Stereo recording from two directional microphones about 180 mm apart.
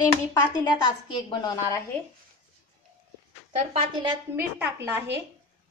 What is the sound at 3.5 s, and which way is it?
Speech, 30° right (ahead or behind).